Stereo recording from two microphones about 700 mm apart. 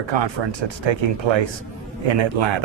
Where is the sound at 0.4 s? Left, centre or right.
Right.